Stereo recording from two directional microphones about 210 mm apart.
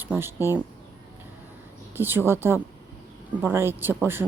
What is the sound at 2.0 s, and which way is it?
Speech, 10° right (ahead or behind).